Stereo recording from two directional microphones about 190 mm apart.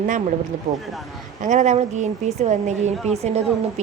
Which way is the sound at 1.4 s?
40° right (ahead or behind).